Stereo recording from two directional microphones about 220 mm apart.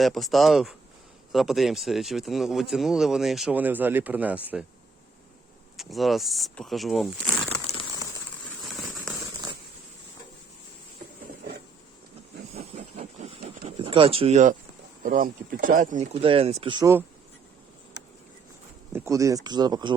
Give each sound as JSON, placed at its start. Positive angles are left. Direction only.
{"t": 0.0, "sound": "speech", "side_deg": 0}
{"t": 5.7, "sound": "speech", "side_deg": 0}
{"t": 7.7, "sound": "crumpling", "side_deg": 25}
{"t": 8.6, "sound": "fireworks", "side_deg": 0}
{"t": 12.5, "sound": "vehicle", "side_deg": -30}
{"t": 13.4, "sound": "a sound", "side_deg": -40}
{"t": 13.7, "sound": "speech", "side_deg": -25}
{"t": 18.9, "sound": "speech", "side_deg": -15}